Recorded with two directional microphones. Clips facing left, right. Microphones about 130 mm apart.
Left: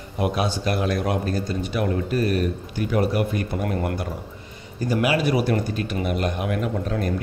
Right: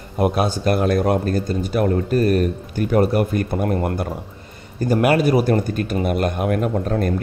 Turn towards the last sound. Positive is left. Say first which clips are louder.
# right 5 dB
turn(degrees=-45)  # may be behind; listen again after turning